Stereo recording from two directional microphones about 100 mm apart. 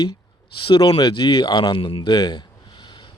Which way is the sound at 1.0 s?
50° left (ahead or behind).